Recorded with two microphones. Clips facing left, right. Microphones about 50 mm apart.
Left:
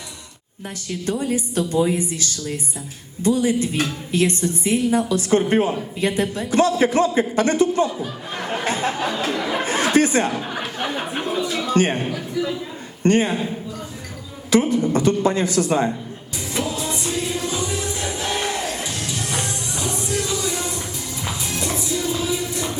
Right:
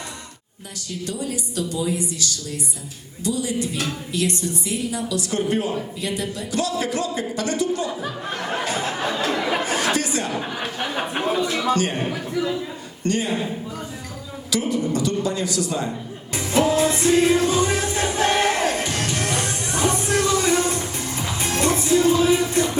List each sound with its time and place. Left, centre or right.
0.9 s a woman's voice: left
8.6 s a sound: left
9.6 s chatter: left
11.3 s speech: right
11.7 s a woman's voice: left
12.0 s a man's voice: centre
13.0 s a man's voice: left
14.5 s a woman's voice: left
16.3 s music: right